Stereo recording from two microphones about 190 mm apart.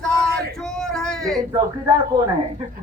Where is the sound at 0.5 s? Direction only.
5° left (ahead or behind).